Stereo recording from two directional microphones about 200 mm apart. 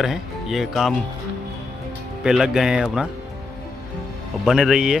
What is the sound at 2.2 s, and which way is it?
Speech, 5° right (ahead or behind).